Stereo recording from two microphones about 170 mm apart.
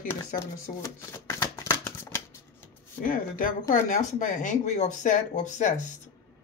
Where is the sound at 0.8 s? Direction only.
15° left (ahead or behind).